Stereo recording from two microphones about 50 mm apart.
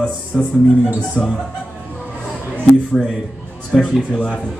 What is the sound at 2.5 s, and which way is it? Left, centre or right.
Speech, left.